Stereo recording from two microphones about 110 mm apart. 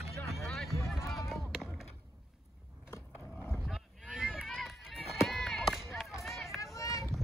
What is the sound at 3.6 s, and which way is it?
Boat, centre (ahead or behind).